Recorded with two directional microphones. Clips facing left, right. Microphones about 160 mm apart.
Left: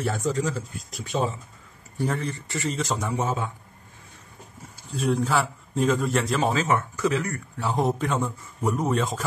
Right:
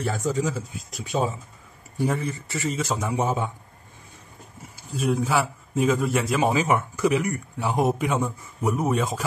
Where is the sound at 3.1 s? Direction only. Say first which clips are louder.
Right 2 dB; 15° right (ahead or behind).